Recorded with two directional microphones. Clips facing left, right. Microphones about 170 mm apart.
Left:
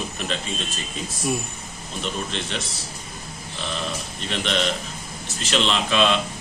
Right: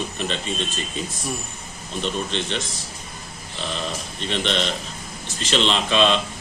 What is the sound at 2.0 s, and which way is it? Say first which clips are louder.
Speech: right 3 dB; 5° left (ahead or behind).